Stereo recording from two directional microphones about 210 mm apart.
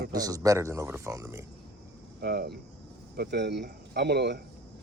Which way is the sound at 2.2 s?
50° right (ahead or behind).